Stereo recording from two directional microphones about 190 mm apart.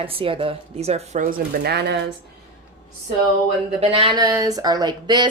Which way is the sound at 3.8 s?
30° right (ahead or behind).